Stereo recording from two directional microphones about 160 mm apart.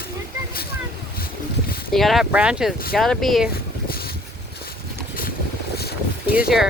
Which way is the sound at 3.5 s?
70° left (ahead or behind).